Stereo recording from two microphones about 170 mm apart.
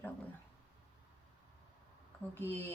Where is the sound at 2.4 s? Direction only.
15° left (ahead or behind).